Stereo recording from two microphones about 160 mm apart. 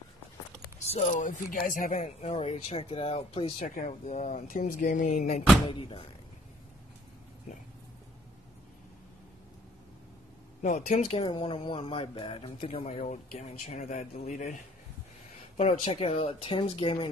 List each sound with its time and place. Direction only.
0.8 s speech: 40° left (ahead or behind)
2.2 s speech: 40° left (ahead or behind)
5.7 s speech: 35° left (ahead or behind)
10.6 s speech: 45° left (ahead or behind)
11.2 s speech: 35° left (ahead or behind); by 14.6 s 50° left (ahead or behind)
15.8 s speech: 40° left (ahead or behind)